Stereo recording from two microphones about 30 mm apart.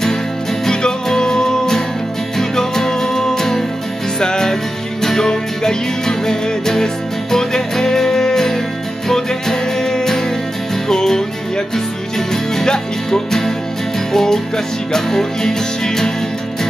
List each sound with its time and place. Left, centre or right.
0.7 s music: centre